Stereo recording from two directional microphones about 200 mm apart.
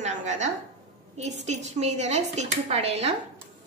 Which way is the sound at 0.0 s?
35° right (ahead or behind).